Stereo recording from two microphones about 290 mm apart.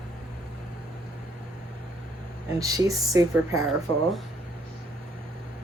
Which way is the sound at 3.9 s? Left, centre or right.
Centre.